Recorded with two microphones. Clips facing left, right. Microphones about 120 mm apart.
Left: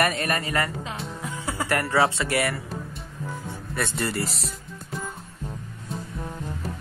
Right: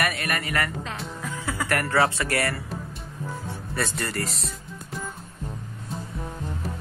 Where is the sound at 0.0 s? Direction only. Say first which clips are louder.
Left 3 dB; 30° left (ahead or behind).